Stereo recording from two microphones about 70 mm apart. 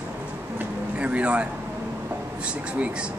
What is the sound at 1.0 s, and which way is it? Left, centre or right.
Speech, centre.